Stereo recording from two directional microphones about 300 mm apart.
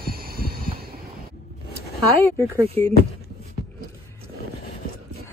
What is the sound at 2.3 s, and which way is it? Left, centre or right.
Speech, centre.